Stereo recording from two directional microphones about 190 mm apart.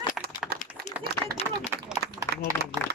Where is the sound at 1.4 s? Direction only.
30° left (ahead or behind).